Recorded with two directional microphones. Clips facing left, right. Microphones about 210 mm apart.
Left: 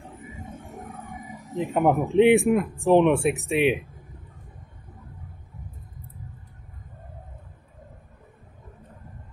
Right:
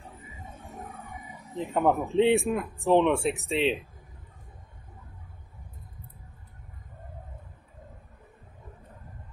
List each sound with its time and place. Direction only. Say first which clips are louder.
0.9 s wild animals: left 5 dB; 45° left (ahead or behind)
1.6 s speech: left 3 dB; 15° left (ahead or behind)